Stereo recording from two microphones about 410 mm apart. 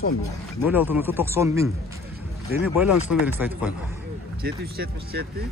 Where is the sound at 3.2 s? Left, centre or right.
Centre.